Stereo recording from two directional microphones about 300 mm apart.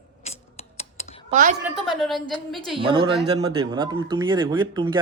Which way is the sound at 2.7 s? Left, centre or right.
Centre.